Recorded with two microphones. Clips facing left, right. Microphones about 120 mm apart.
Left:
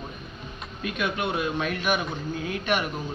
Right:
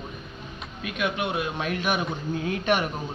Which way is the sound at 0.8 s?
10° right (ahead or behind).